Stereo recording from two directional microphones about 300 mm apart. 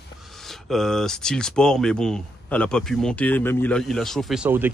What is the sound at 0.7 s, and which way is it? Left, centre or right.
Speech, centre.